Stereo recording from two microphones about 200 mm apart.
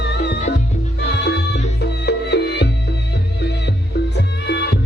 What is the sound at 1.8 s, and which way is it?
Music, 55° left (ahead or behind).